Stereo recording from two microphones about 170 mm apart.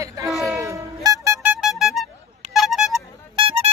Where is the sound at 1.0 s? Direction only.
15° right (ahead or behind); by 2.1 s centre (ahead or behind).